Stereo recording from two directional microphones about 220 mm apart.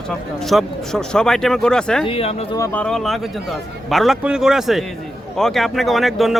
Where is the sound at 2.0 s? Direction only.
25° left (ahead or behind).